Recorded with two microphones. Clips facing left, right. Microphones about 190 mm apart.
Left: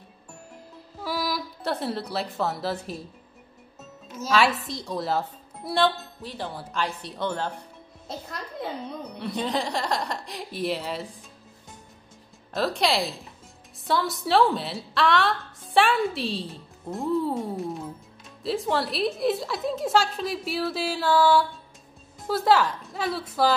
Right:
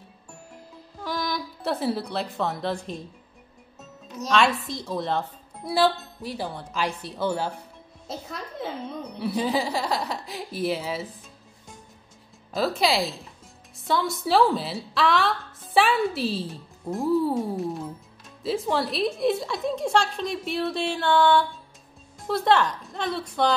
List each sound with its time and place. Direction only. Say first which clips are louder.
0.9 s speech: even; 5° left (ahead or behind)
4.1 s a woman's voice: even; 5° left (ahead or behind)
6.5 s a woman's voice: right 1 dB; centre (ahead or behind)
12.5 s a woman's voice: right 1 dB; centre (ahead or behind)